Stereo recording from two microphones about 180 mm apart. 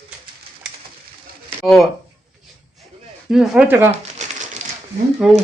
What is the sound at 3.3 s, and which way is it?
Speech, 5° right (ahead or behind).